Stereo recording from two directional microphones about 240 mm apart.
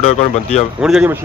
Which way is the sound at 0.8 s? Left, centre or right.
Centre.